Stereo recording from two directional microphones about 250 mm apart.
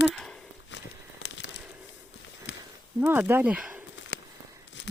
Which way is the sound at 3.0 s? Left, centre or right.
Centre.